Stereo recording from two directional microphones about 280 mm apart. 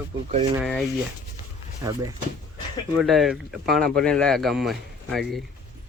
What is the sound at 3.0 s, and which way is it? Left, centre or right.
Speech, centre.